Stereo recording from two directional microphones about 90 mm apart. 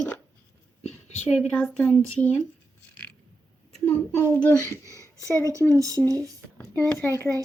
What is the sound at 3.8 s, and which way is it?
Speech, 20° left (ahead or behind).